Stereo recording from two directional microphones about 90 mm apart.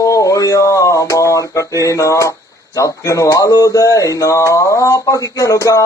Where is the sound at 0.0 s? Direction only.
40° left (ahead or behind).